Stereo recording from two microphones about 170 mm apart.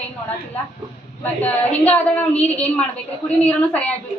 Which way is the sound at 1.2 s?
10° left (ahead or behind).